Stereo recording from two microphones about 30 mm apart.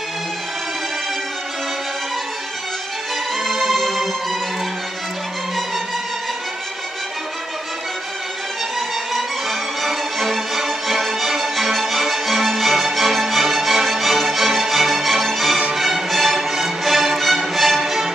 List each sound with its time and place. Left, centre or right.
3.4 s music: centre
8.7 s music: centre